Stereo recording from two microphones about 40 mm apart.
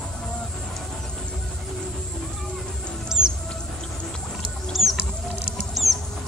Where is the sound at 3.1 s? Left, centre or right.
Centre.